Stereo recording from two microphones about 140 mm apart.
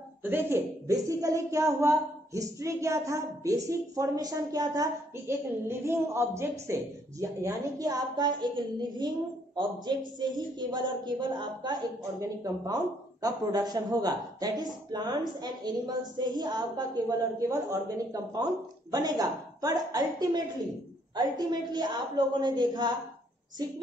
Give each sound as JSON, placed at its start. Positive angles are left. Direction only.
{"t": 0.2, "sound": "a woman's voice", "side_deg": -15}